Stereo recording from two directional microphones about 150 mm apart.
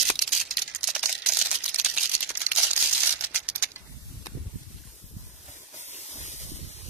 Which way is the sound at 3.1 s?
10° right (ahead or behind).